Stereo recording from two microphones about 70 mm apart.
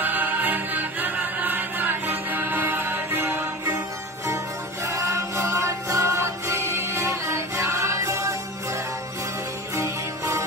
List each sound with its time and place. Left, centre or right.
0.0 s music: right
4.8 s music: right
9.8 s music: right